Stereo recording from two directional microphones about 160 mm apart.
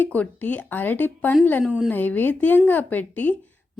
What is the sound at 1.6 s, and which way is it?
Speech, 5° right (ahead or behind).